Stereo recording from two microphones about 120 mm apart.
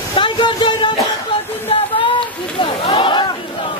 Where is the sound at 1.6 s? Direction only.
45° left (ahead or behind).